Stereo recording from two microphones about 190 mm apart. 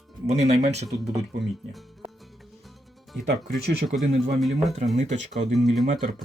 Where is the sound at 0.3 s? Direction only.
35° right (ahead or behind).